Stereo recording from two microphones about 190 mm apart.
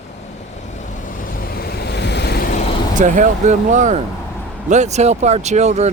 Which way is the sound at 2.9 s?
40° right (ahead or behind).